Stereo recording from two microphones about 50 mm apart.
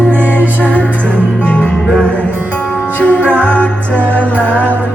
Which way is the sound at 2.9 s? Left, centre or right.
Left.